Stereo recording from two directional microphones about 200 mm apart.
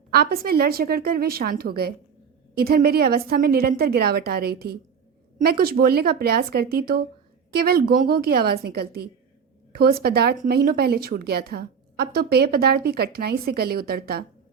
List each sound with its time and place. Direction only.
0.1 s a woman's voice: 50° right (ahead or behind)